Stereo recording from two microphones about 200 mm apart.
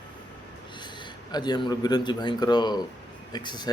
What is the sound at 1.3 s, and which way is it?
A man's voice, 20° left (ahead or behind).